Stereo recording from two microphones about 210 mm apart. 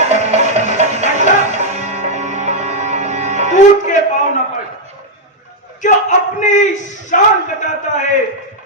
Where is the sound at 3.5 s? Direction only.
35° left (ahead or behind).